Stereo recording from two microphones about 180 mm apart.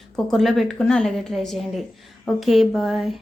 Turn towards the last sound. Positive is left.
turn(degrees=0)  # may be behind; listen again after turning